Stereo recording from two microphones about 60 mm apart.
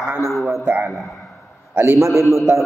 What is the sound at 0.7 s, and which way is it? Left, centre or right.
Speech, right.